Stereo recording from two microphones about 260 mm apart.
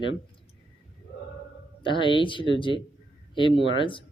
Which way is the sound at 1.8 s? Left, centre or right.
Centre.